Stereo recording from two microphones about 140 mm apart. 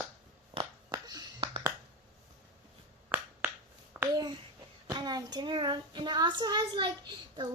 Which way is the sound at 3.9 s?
15° right (ahead or behind).